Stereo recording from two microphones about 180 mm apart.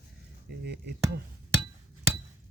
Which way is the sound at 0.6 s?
65° right (ahead or behind).